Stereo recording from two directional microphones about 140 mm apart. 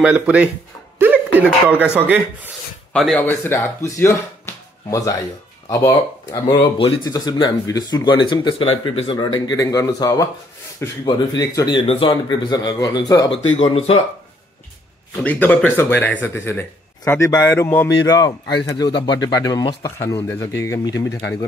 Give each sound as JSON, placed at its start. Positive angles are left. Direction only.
{"t": 0.0, "sound": "speech", "side_deg": -10}
{"t": 0.9, "sound": "a sound", "side_deg": -15}
{"t": 2.0, "sound": "speech", "side_deg": -15}
{"t": 2.9, "sound": "speech", "side_deg": 5}
{"t": 3.3, "sound": "speech", "side_deg": 15}
{"t": 5.7, "sound": "speech", "side_deg": 20}
{"t": 6.5, "sound": "speech", "side_deg": 35}
{"t": 11.8, "sound": "speech", "side_deg": 40}
{"t": 13.7, "sound": "speech", "side_deg": 45}
{"t": 15.2, "sound": "speech", "side_deg": 10}